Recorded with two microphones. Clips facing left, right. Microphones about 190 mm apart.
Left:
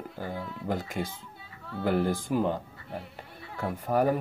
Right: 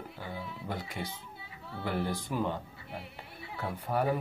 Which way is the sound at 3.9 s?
90° left.